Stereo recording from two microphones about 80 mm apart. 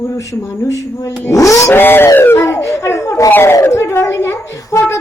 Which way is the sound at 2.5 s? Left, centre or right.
Left.